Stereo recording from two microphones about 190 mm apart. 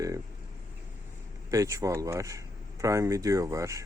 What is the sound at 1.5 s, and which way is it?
Speech, 15° right (ahead or behind).